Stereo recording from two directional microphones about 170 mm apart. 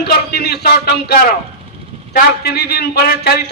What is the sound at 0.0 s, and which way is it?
Speech, 70° left (ahead or behind).